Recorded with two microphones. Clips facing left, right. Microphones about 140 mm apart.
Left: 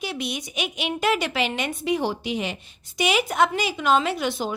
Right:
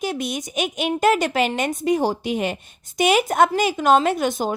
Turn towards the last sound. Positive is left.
turn(degrees=-45)  # may be behind; listen again after turning